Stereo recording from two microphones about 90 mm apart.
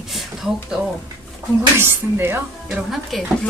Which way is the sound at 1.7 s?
25° right (ahead or behind).